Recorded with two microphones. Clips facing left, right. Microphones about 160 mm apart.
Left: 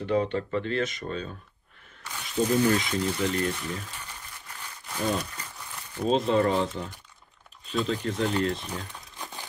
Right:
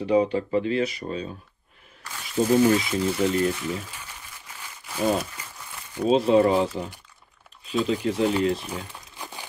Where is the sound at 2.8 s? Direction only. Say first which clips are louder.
Right 4 dB; 5° right (ahead or behind).